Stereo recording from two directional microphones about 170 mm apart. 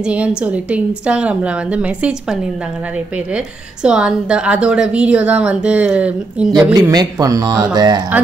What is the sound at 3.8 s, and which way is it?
A woman's voice, 5° right (ahead or behind).